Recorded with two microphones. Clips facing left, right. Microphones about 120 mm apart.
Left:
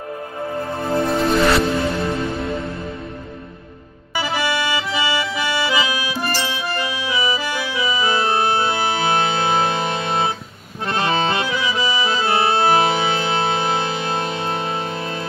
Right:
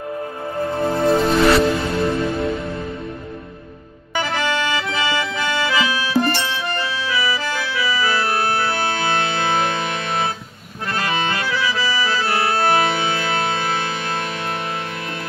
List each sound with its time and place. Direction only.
1.0 s music: centre (ahead or behind)
4.1 s music: 10° left (ahead or behind)
4.8 s accordion: 10° left (ahead or behind)
6.6 s music: 10° left (ahead or behind)
10.9 s accordion: 25° left (ahead or behind)
11.4 s accordion: 20° left (ahead or behind)